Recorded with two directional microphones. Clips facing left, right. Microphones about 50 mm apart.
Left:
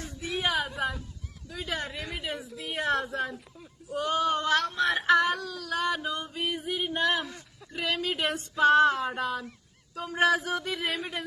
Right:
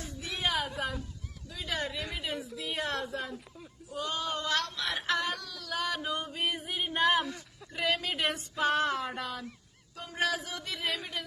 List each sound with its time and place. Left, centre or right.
0.2 s a sound: centre
1.5 s a sound: left
2.0 s a woman's voice: centre
2.6 s female singing: centre
3.0 s a woman's voice: left
3.3 s speech: centre
4.0 s a sound: left
4.9 s female singing: centre
10.8 s speech: centre